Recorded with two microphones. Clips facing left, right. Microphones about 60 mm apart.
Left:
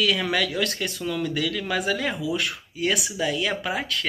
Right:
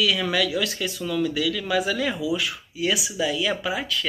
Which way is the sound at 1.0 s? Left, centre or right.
Left.